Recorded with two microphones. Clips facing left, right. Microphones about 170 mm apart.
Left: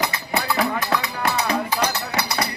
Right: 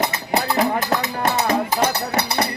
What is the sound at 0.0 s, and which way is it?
Music, 40° right (ahead or behind).